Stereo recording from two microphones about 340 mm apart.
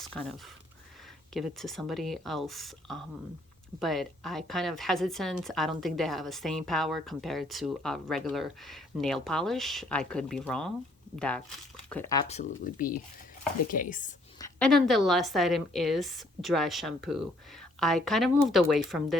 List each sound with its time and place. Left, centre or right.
0.0 s speech: centre; by 14.1 s left
14.3 s speech: centre